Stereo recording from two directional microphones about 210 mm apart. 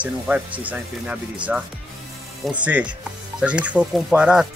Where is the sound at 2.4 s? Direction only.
5° right (ahead or behind).